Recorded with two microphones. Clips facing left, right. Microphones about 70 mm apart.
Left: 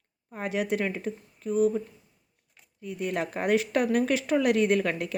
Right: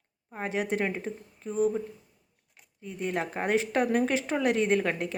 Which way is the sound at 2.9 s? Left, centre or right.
Right.